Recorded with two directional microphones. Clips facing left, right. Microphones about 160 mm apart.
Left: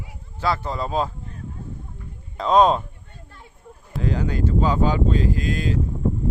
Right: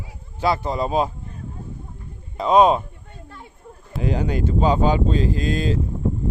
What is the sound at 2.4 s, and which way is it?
Speech, 10° right (ahead or behind).